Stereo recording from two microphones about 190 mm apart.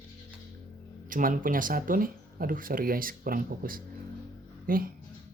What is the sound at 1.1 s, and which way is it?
Speech, 45° right (ahead or behind).